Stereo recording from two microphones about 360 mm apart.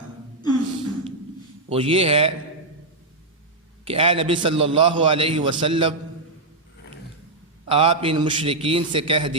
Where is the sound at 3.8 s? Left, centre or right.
Centre.